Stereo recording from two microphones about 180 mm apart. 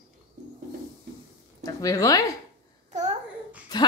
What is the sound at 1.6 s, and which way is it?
Speech, 20° left (ahead or behind).